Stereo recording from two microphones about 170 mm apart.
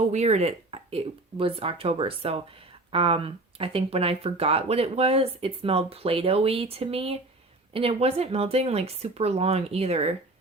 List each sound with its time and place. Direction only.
0.1 s speech: 40° right (ahead or behind)